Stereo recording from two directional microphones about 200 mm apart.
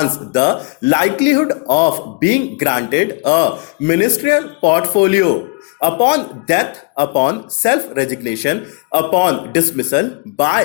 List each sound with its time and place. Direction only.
0.3 s speech: 20° left (ahead or behind)